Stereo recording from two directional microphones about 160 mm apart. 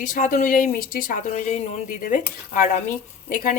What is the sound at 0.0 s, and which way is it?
Speech, 55° left (ahead or behind).